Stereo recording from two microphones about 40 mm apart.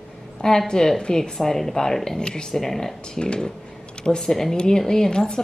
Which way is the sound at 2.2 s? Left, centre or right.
Left.